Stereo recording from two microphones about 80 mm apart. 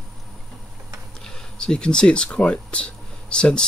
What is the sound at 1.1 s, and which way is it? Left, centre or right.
Speech, centre.